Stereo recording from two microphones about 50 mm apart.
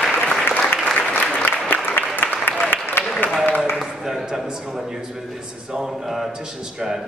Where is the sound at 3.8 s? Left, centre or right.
Centre.